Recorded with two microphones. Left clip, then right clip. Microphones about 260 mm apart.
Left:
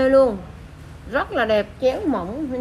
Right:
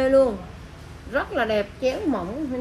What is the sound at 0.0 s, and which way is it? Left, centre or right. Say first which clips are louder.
A woman's voice: left 3 dB; centre.